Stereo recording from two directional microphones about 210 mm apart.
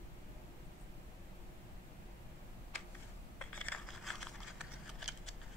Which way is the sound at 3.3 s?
5° left (ahead or behind).